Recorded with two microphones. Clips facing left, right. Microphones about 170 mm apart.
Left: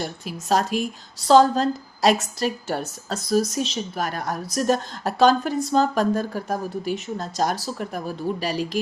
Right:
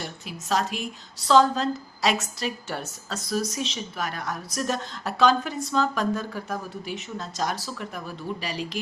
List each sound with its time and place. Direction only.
0.0 s speech: 40° left (ahead or behind)